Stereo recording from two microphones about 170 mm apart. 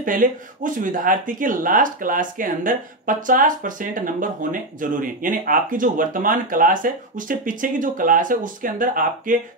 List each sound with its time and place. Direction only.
0.0 s speech: 50° right (ahead or behind)